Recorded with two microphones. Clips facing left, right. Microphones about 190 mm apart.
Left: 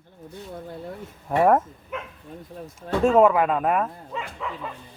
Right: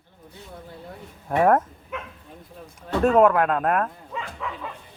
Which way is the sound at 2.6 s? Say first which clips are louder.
Left 4 dB; 45° left (ahead or behind).